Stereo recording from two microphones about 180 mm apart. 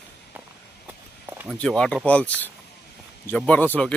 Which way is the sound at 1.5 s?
5° left (ahead or behind).